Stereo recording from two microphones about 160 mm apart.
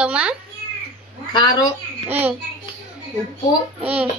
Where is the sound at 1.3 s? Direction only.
25° left (ahead or behind).